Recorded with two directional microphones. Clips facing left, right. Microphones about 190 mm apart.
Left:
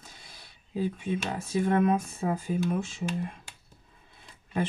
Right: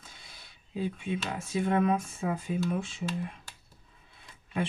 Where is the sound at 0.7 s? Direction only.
40° left (ahead or behind).